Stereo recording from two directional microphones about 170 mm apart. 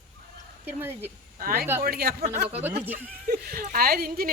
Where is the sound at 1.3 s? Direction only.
60° right (ahead or behind).